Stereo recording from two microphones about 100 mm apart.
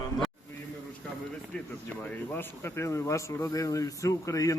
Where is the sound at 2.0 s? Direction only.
20° left (ahead or behind).